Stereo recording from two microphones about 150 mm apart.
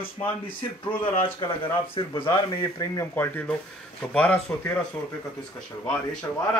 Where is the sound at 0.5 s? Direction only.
35° left (ahead or behind); by 4.7 s 10° left (ahead or behind).